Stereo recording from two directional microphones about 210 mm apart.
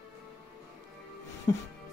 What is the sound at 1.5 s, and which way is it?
Music, 20° left (ahead or behind).